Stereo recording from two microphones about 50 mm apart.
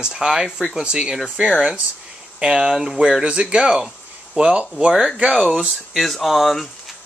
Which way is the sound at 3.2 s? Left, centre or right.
Centre.